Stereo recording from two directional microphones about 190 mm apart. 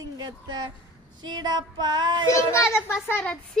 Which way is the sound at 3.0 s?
10° left (ahead or behind).